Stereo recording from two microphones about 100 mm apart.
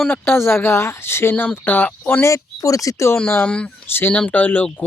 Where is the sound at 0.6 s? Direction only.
25° left (ahead or behind).